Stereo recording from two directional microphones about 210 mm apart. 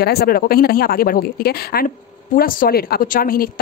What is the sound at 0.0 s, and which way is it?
A woman's voice, 50° left (ahead or behind).